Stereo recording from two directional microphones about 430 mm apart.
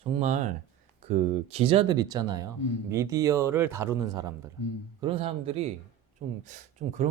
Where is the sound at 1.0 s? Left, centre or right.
Centre.